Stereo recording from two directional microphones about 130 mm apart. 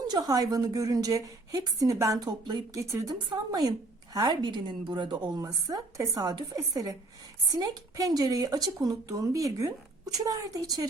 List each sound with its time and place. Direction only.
0.1 s a woman's voice: 30° right (ahead or behind)